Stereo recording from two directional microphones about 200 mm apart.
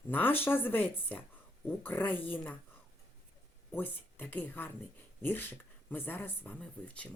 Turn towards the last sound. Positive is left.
turn(degrees=5)  # may be behind; listen again after turning